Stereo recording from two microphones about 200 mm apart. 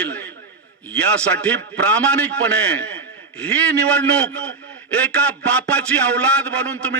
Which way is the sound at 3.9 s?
5° left (ahead or behind).